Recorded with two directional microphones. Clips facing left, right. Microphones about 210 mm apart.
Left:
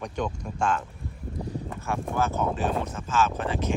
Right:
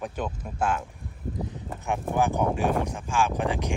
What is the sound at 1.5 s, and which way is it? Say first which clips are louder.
Clip-clop: left 3 dB; 15° right (ahead or behind).